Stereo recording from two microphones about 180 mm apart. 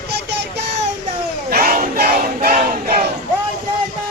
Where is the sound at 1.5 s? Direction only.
55° right (ahead or behind).